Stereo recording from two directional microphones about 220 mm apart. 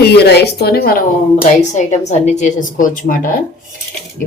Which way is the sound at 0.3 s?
45° left (ahead or behind).